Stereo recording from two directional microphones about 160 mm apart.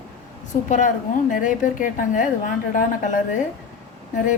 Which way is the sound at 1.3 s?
55° left (ahead or behind).